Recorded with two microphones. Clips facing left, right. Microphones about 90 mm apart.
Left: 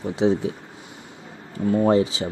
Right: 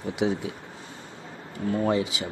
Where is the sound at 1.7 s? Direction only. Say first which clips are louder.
Left 6 dB; 30° left (ahead or behind).